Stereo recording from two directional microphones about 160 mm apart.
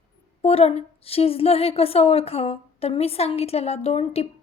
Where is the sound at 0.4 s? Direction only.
40° left (ahead or behind).